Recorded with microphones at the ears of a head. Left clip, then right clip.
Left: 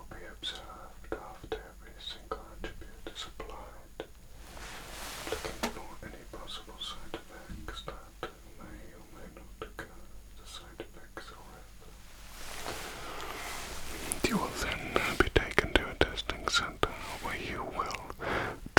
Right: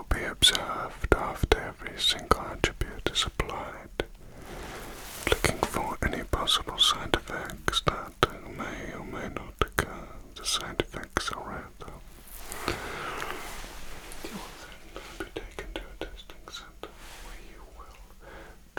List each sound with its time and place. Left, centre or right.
0.1 s whispering: right
5.2 s whispering: right
12.6 s a sound: right
14.0 s whispering: left